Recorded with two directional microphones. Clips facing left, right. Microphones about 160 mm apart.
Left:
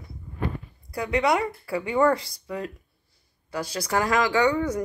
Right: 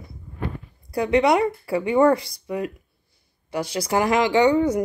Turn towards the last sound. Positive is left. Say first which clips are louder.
# right 5 dB
turn(degrees=-25)  # may be behind; listen again after turning